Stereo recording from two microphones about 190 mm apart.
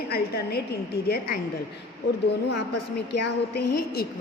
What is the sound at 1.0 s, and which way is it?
Speech, 55° left (ahead or behind).